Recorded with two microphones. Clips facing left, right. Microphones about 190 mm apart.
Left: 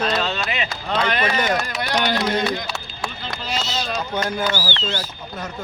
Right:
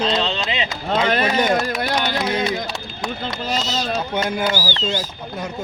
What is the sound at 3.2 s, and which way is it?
Speech, 45° right (ahead or behind).